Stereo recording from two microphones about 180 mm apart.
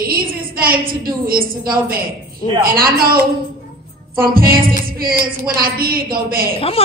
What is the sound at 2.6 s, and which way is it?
Speech, 55° right (ahead or behind).